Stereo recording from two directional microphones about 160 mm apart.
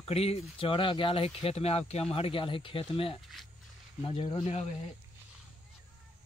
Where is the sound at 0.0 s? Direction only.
40° left (ahead or behind).